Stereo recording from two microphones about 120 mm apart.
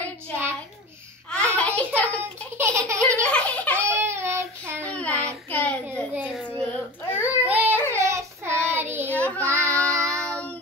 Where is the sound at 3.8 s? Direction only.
20° right (ahead or behind).